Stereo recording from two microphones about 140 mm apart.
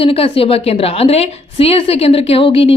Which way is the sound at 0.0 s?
40° left (ahead or behind).